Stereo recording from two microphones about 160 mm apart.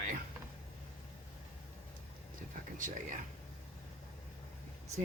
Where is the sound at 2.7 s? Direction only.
55° right (ahead or behind).